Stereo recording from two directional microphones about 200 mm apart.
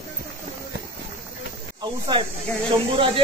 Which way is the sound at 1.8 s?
20° right (ahead or behind).